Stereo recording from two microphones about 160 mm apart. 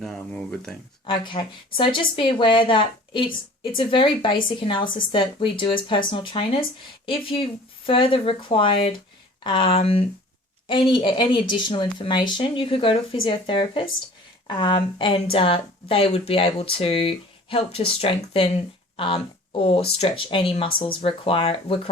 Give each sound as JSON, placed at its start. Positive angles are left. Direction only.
{"t": 0.0, "sound": "speech", "side_deg": 5}
{"t": 1.0, "sound": "speech", "side_deg": 30}